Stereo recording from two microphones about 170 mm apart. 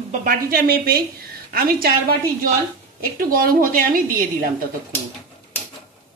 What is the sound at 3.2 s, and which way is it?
Speech, 55° right (ahead or behind).